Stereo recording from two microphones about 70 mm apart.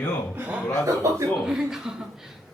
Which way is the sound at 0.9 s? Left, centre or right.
Right.